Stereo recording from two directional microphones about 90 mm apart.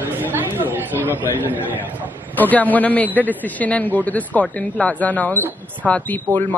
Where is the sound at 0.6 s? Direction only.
20° right (ahead or behind).